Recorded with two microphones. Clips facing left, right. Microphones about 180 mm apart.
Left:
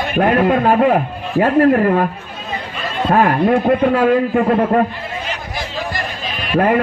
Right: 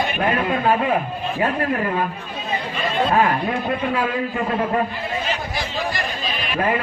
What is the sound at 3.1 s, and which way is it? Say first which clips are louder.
A man's voice: left 9 dB; 55° left (ahead or behind).